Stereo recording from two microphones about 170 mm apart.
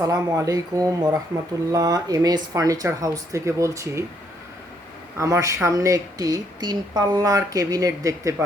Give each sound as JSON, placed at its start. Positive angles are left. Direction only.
{"t": 0.0, "sound": "speech", "side_deg": -20}
{"t": 5.1, "sound": "speech", "side_deg": -15}